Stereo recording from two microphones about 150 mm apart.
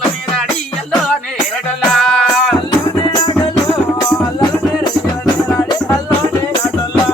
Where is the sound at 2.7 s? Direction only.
30° left (ahead or behind).